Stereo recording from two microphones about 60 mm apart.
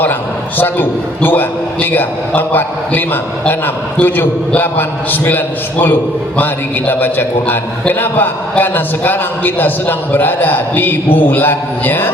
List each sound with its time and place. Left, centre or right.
0.6 s a man's voice: left